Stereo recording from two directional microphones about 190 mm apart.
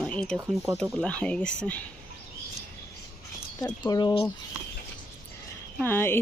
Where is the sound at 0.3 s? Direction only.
15° right (ahead or behind).